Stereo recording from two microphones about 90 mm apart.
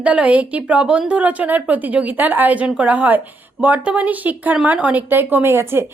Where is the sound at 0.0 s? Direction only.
15° right (ahead or behind).